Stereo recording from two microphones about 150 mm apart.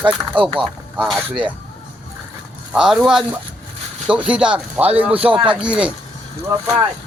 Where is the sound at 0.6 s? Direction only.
Centre (ahead or behind).